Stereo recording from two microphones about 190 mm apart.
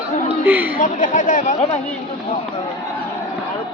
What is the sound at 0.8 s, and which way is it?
Speech, 45° left (ahead or behind).